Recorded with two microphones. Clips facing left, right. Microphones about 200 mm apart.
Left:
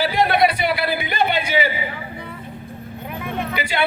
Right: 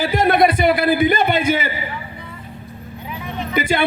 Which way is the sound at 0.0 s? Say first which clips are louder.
Right 2 dB; 45° right (ahead or behind).